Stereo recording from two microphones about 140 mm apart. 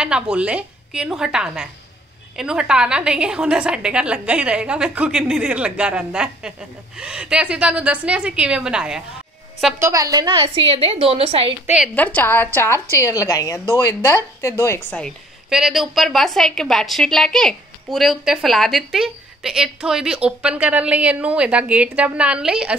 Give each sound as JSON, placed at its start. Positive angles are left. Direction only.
{"t": 0.0, "sound": "a woman's voice", "side_deg": -5}
{"t": 9.8, "sound": "a woman's voice", "side_deg": -20}
{"t": 11.6, "sound": "a woman's voice", "side_deg": -5}
{"t": 11.9, "sound": "a woman's voice", "side_deg": 10}
{"t": 15.5, "sound": "a woman's voice", "side_deg": -5}